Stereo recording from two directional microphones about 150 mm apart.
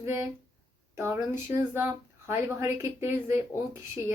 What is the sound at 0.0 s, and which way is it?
Speech, 20° right (ahead or behind).